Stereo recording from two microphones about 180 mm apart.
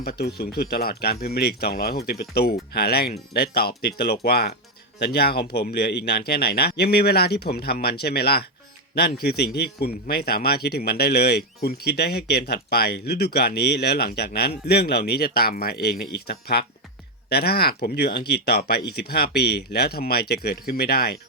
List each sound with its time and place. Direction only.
0.0 s a man's voice: 60° left (ahead or behind)